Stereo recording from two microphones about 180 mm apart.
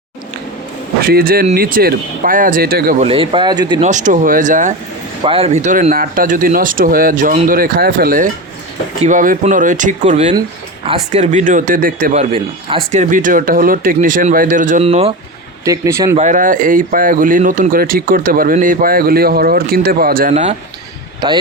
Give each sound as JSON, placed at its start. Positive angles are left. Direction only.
{"t": 1.0, "sound": "speech", "side_deg": -55}
{"t": 3.0, "sound": "speech", "side_deg": -30}
{"t": 3.8, "sound": "speech", "side_deg": -45}
{"t": 5.2, "sound": "speech", "side_deg": -30}
{"t": 12.3, "sound": "speech", "side_deg": -30}
{"t": 12.9, "sound": "speech", "side_deg": -45}
{"t": 15.6, "sound": "speech", "side_deg": -20}
{"t": 16.1, "sound": "speech", "side_deg": -45}
{"t": 20.3, "sound": "speech", "side_deg": -40}
{"t": 21.2, "sound": "speech", "side_deg": -20}